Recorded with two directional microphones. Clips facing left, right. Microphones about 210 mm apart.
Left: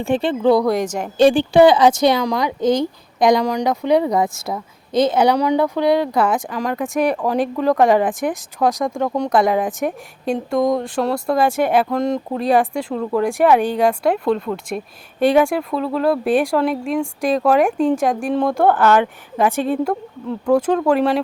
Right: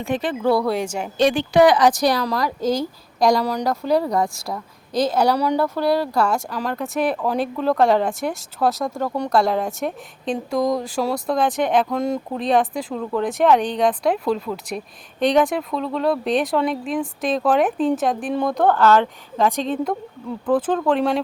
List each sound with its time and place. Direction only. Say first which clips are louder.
0.0 s speech: left 4 dB; 30° left (ahead or behind)
0.8 s a woman's voice: left 3 dB; 10° right (ahead or behind)
1.2 s speech: left 4 dB; 30° left (ahead or behind)
2.4 s speech: left 4 dB; centre (ahead or behind)
5.5 s speech: left 3 dB; 15° left (ahead or behind)
5.7 s speech: left 3 dB; 5° right (ahead or behind)
7.0 s speech: left 3 dB; 15° left (ahead or behind)
18.7 s speech: left 1 dB; 15° left (ahead or behind)